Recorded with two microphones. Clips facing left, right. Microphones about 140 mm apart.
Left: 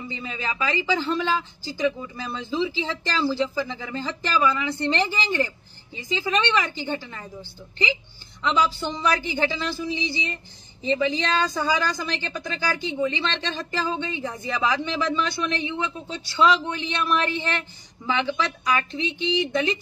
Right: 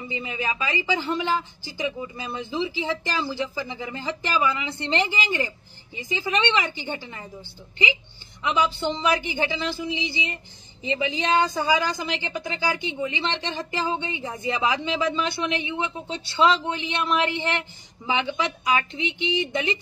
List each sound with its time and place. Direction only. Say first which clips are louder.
0.1 s a man's voice: right 4 dB; 15° right (ahead or behind)
8.4 s a man's voice: left 1 dB; 20° right (ahead or behind)